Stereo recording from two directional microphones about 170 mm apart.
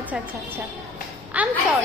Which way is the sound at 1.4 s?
10° right (ahead or behind).